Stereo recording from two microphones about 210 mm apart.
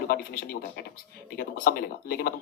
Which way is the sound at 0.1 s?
45° left (ahead or behind).